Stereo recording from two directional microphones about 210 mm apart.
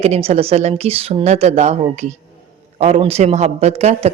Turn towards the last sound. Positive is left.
turn(degrees=-30)  # may be behind; listen again after turning